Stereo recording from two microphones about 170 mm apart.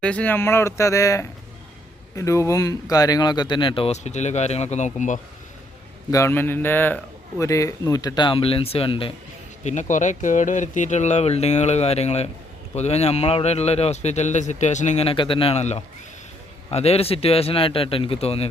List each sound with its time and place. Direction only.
0.0 s a man's voice: 5° left (ahead or behind); by 5.2 s 45° left (ahead or behind)
6.1 s a man's voice: 15° left (ahead or behind); by 9.1 s 30° left (ahead or behind)
9.6 s a man's voice: 45° left (ahead or behind)